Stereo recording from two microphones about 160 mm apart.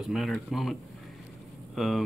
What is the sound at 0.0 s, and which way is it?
Speech, centre (ahead or behind).